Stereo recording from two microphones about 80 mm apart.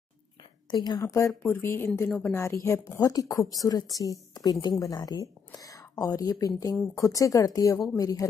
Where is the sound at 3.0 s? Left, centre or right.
Left.